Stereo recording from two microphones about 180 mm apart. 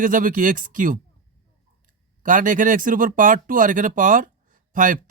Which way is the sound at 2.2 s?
45° right (ahead or behind).